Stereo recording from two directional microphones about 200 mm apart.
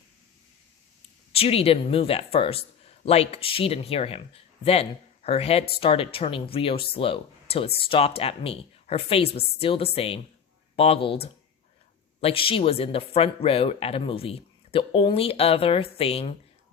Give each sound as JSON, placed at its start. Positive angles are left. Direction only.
{"t": 1.3, "sound": "speech", "side_deg": 30}